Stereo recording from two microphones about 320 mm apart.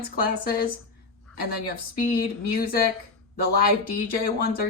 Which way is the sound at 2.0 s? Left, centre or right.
Left.